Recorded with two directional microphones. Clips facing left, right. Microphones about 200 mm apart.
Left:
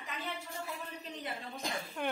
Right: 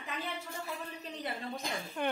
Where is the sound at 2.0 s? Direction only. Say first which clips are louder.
Right 2 dB; 5° left (ahead or behind).